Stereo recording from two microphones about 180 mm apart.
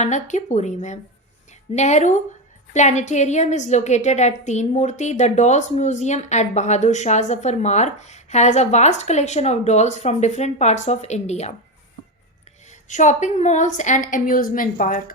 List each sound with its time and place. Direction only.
0.0 s a woman's voice: 40° left (ahead or behind)
12.9 s a woman's voice: 45° left (ahead or behind)